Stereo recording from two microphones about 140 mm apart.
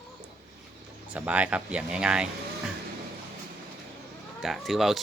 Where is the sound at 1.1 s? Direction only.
10° right (ahead or behind).